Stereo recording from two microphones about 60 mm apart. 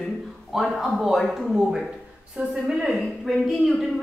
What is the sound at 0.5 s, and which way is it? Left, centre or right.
A man's voice, centre.